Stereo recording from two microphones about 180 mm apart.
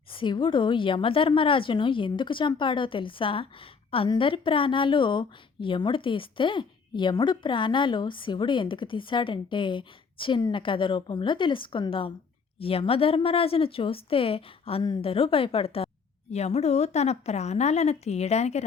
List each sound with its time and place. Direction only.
0.1 s a woman's voice: 30° left (ahead or behind)